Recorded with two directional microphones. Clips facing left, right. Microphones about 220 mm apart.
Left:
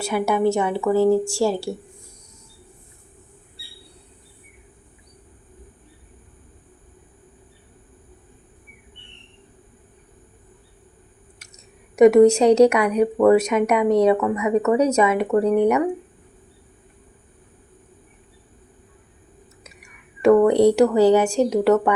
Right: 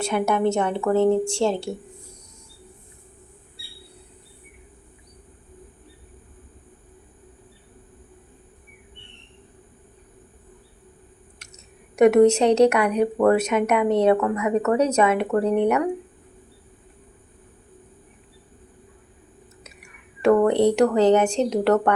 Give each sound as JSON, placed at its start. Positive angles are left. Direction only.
{"t": 0.0, "sound": "speech", "side_deg": 5}
{"t": 11.3, "sound": "speech", "side_deg": 10}
{"t": 19.8, "sound": "a woman's voice", "side_deg": 10}